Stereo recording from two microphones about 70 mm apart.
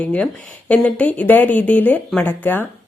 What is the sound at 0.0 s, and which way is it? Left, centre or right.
A woman's voice, centre.